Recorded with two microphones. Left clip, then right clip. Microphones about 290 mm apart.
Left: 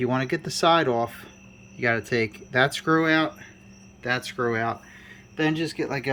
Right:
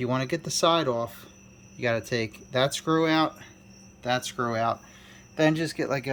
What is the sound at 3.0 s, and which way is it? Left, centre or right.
Speech, centre.